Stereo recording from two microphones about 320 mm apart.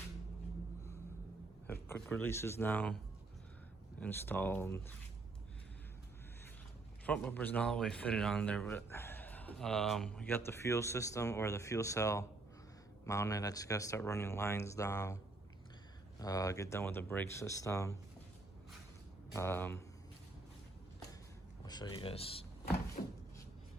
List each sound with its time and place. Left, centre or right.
1.6 s speech: centre
4.0 s speech: centre
7.0 s speech: centre
19.3 s speech: centre
21.6 s speech: centre
23.0 s a sound: centre